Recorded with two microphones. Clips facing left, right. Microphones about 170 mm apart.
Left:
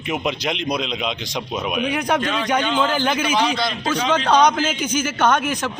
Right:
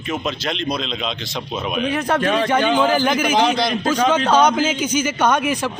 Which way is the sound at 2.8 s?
10° right (ahead or behind).